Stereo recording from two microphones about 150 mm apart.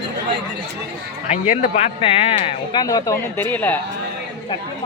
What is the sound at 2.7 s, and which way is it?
Speech, 25° left (ahead or behind).